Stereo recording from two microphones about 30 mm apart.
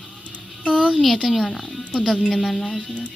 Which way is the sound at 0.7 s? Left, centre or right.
Right.